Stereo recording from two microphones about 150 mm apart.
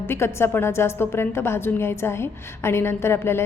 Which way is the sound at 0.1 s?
15° left (ahead or behind).